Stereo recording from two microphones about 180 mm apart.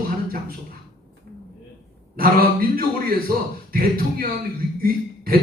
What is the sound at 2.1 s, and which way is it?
Speech, 55° right (ahead or behind).